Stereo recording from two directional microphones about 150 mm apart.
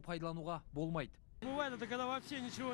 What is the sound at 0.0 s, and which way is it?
Speech, 30° right (ahead or behind).